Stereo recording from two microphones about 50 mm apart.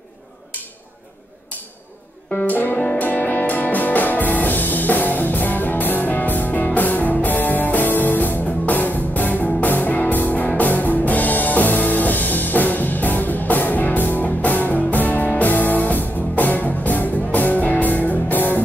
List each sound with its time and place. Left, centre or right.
2.4 s music: left